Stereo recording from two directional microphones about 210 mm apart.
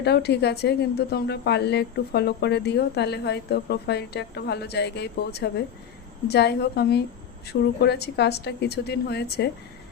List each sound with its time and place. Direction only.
0.0 s a woman's voice: 50° left (ahead or behind)